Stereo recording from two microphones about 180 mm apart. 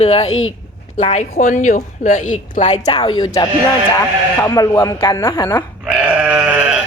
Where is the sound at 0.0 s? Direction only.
35° left (ahead or behind).